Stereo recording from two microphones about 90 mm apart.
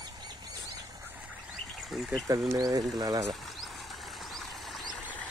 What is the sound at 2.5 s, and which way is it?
Speech, 45° right (ahead or behind).